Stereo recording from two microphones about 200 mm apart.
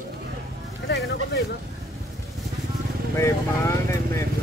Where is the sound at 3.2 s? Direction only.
15° left (ahead or behind).